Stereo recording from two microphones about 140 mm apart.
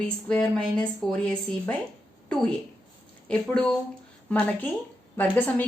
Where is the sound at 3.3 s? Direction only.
5° left (ahead or behind).